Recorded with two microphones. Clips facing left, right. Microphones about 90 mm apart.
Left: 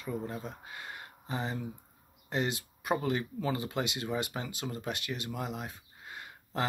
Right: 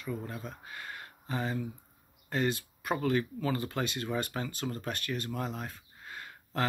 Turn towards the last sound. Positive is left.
turn(degrees=20)  # may be behind; listen again after turning